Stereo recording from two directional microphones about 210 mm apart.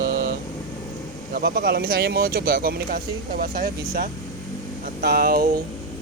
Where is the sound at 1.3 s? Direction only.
50° right (ahead or behind).